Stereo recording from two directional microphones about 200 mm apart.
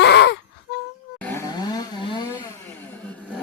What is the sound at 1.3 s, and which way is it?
Chainsaw, 20° left (ahead or behind).